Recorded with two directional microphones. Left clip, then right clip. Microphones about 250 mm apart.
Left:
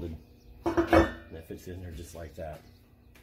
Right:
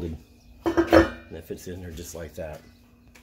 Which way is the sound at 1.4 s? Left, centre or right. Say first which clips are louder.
Right 9 dB; right.